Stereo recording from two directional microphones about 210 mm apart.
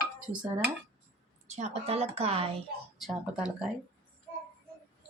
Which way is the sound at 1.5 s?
30° right (ahead or behind).